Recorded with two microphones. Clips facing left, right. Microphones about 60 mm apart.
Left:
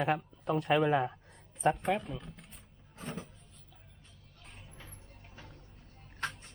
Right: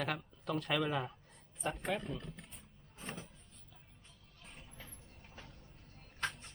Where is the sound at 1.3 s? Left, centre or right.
Left.